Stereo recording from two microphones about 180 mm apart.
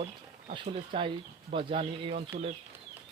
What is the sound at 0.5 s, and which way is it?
Speech, 30° right (ahead or behind).